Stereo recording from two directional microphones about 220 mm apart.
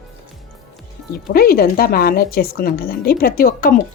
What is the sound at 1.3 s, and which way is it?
A woman's voice, 45° left (ahead or behind).